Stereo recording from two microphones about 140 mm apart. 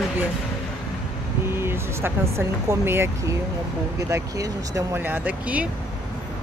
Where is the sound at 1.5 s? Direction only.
15° right (ahead or behind).